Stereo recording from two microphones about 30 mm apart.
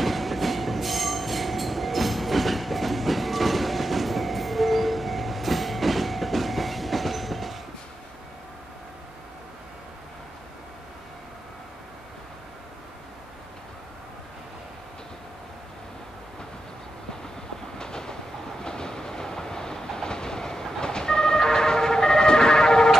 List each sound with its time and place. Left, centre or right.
0.0 s train: centre
17.7 s train: left
20.8 s emergency vehicle: left